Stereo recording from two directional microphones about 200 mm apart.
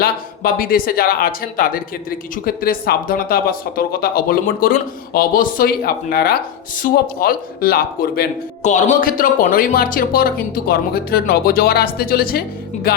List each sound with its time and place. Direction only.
0.0 s speech: 45° left (ahead or behind)
8.6 s speech: 40° left (ahead or behind)